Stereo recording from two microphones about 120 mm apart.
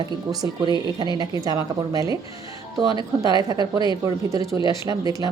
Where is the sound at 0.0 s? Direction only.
35° right (ahead or behind).